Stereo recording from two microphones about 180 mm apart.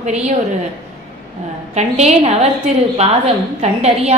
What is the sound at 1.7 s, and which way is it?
Speech, 40° right (ahead or behind).